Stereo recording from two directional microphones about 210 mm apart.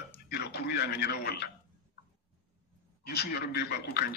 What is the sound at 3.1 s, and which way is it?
Speech, 50° left (ahead or behind).